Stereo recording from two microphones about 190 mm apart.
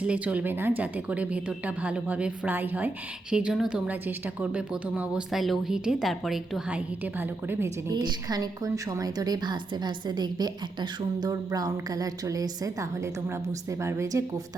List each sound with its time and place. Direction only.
0.0 s a woman's voice: 5° right (ahead or behind)